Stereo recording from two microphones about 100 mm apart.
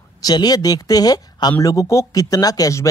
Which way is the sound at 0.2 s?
40° left (ahead or behind).